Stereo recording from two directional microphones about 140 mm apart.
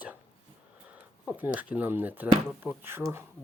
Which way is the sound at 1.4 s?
10° right (ahead or behind).